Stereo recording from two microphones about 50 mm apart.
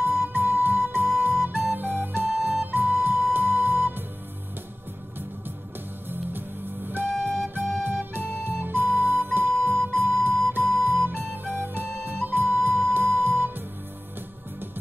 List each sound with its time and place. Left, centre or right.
0.0 s flute: right
3.3 s music: right
6.9 s flute: right